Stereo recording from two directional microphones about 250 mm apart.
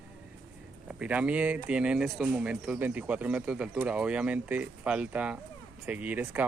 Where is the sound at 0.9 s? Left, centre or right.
Centre.